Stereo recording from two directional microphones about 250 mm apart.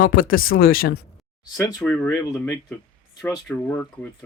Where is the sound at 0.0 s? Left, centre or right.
Left.